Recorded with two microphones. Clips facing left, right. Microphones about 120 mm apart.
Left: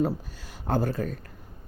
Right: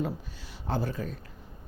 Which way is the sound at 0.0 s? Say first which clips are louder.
Left 6 dB; 45° left (ahead or behind).